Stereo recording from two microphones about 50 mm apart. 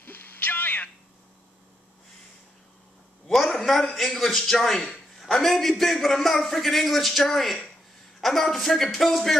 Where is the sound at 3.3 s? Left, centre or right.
Centre.